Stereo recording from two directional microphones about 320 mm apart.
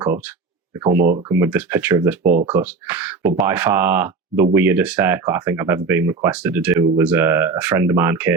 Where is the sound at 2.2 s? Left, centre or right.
Right.